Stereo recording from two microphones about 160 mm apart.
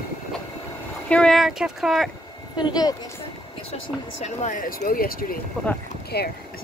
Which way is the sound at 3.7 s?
45° left (ahead or behind).